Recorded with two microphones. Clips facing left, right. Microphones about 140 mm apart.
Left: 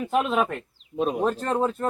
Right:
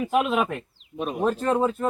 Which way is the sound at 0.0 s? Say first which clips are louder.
Right 1 dB; 5° right (ahead or behind).